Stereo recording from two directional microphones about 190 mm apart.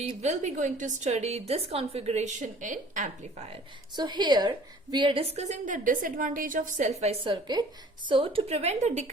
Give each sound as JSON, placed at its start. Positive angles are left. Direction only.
{"t": 0.0, "sound": "a woman's voice", "side_deg": -35}
{"t": 3.9, "sound": "a woman's voice", "side_deg": -25}
{"t": 7.0, "sound": "a woman's voice", "side_deg": -30}